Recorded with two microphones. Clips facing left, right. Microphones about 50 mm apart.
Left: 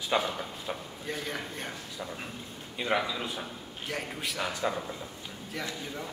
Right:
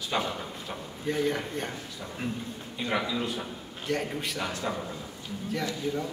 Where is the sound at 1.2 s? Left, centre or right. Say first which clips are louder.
Right 7 dB; centre.